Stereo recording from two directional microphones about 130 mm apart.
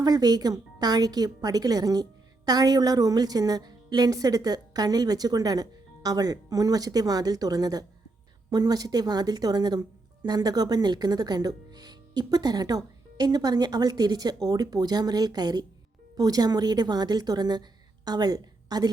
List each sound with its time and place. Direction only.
0.0 s a woman's voice: 30° right (ahead or behind)